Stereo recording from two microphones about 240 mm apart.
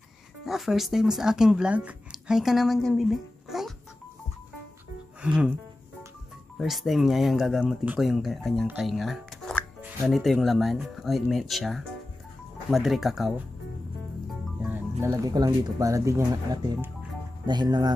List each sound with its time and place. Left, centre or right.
0.5 s speech: centre
6.6 s speech: centre
14.6 s speech: centre